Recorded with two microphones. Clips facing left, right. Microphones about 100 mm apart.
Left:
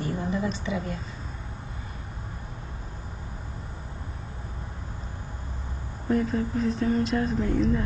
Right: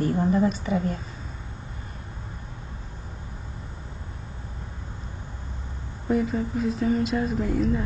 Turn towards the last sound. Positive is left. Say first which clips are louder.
# even
turn(degrees=-5)  # may be behind; listen again after turning